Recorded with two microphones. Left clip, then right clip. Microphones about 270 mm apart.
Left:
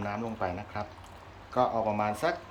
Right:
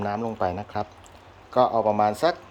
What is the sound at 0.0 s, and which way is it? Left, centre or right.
Speech, right.